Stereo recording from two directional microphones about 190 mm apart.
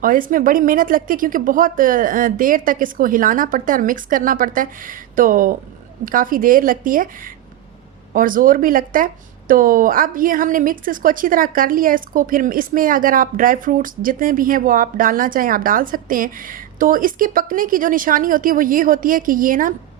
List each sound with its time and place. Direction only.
0.0 s a woman's voice: 45° right (ahead or behind)